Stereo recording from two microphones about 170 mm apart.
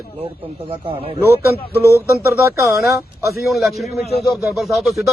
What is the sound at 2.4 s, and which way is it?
Speech, 15° right (ahead or behind).